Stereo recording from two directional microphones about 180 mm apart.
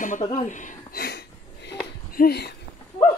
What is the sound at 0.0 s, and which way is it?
Speech, 45° left (ahead or behind).